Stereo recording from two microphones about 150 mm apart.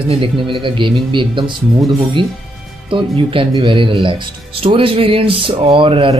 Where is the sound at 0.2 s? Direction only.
35° right (ahead or behind).